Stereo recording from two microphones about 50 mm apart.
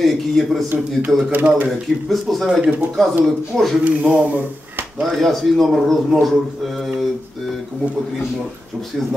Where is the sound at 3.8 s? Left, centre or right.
Right.